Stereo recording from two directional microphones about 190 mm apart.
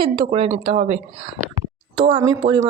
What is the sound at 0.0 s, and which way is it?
A woman's voice, 30° right (ahead or behind).